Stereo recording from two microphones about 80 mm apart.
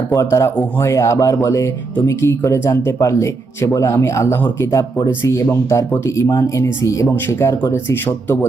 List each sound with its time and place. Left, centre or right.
0.1 s speech: left